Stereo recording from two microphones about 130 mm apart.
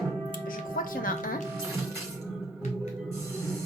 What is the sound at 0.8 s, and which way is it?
Speech, 90° left.